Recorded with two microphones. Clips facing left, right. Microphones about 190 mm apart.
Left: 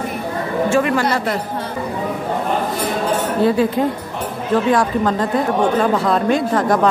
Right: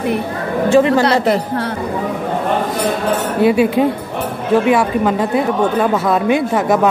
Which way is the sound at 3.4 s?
10° right (ahead or behind).